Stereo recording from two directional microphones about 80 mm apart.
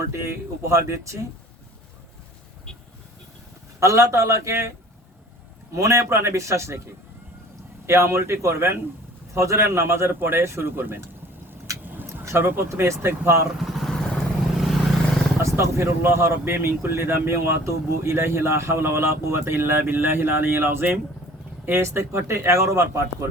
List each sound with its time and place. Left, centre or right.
0.7 s speech: right
3.8 s speech: right
5.7 s speech: right
7.9 s speech: right
11.9 s a sound: right
12.5 s speech: right
13.6 s vehicle: centre
15.4 s speech: right